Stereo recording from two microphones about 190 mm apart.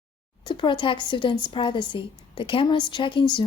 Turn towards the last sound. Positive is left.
turn(degrees=25)  # may be behind; listen again after turning